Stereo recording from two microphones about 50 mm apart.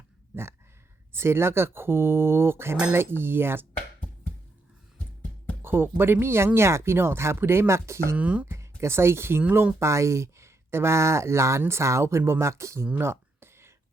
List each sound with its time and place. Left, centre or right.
1.1 s speech: right
5.6 s speech: right
8.1 s speech: right
8.4 s speech: right
9.8 s speech: right
12.5 s speech: right
13.0 s a sound: right